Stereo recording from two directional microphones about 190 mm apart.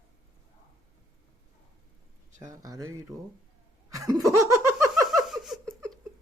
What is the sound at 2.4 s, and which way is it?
Speech, 20° right (ahead or behind).